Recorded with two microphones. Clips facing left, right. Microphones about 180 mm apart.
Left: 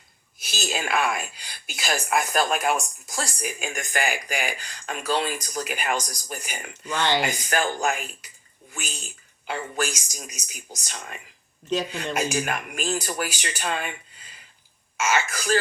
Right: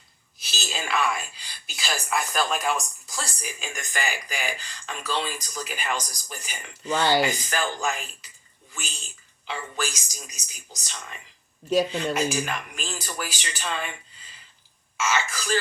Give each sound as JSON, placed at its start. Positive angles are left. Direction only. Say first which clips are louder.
{"t": 0.4, "sound": "a woman's voice", "louder": "left 4 dB", "side_deg": 55}
{"t": 6.9, "sound": "speech", "louder": "right 2 dB", "side_deg": -10}
{"t": 7.4, "sound": "a woman's voice", "louder": "left 3 dB", "side_deg": 55}
{"t": 9.5, "sound": "speech", "louder": "left 3 dB", "side_deg": 55}
{"t": 11.7, "sound": "speech", "louder": "right 4 dB", "side_deg": -10}
{"t": 12.1, "sound": "speech", "louder": "even", "side_deg": 50}
{"t": 14.9, "sound": "speech", "louder": "left 2 dB", "side_deg": 55}